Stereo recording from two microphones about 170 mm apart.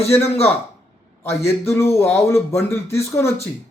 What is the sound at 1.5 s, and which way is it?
Speech, 15° left (ahead or behind).